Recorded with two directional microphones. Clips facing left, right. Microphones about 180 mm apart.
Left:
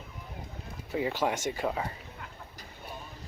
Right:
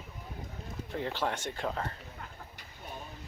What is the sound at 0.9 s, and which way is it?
Speech, 10° left (ahead or behind).